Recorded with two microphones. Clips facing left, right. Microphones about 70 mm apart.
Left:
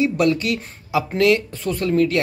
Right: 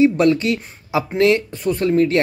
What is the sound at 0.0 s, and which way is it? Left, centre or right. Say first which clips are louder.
Speech: right 4 dB; right.